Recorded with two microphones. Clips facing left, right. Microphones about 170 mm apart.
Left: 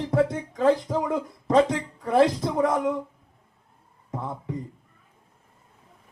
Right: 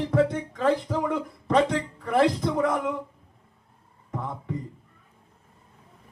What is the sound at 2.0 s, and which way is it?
Speech, 35° left (ahead or behind).